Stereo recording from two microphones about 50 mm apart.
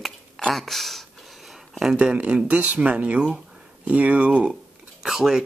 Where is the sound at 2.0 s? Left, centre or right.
Right.